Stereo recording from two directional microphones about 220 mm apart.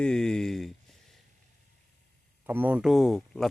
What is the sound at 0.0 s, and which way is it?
Speech, 5° left (ahead or behind).